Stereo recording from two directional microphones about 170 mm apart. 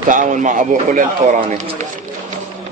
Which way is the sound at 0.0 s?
50° right (ahead or behind).